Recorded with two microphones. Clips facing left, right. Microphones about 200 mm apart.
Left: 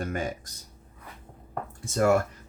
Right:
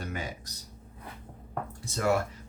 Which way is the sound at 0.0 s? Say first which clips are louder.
Left 6 dB; 50° left (ahead or behind).